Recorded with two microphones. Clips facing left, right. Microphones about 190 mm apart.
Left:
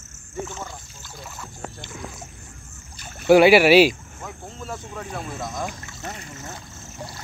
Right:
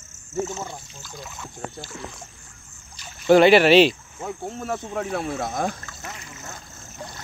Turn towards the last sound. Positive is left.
turn(degrees=35)  # may be behind; listen again after turning